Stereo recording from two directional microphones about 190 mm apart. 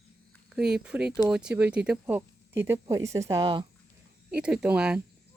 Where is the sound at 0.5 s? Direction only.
5° right (ahead or behind); by 3.7 s 20° right (ahead or behind).